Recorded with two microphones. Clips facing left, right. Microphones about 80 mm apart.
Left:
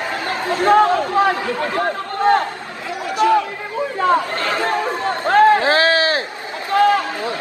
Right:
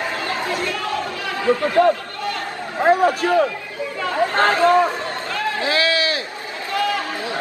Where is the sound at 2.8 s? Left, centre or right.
Right.